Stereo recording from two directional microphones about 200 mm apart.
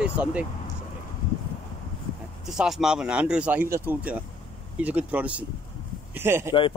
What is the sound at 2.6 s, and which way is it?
A man's voice, centre (ahead or behind).